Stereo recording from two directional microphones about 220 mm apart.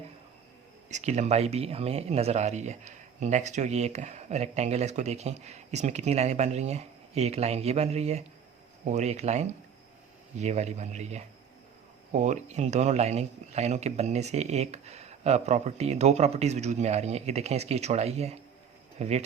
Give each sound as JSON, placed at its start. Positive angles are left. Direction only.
{"t": 0.9, "sound": "speech", "side_deg": -30}